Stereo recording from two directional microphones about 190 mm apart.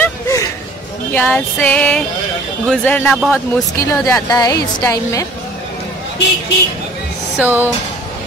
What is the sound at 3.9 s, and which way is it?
A woman's voice, 15° left (ahead or behind).